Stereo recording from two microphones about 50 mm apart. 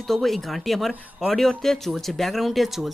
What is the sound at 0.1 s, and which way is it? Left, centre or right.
Speech, centre.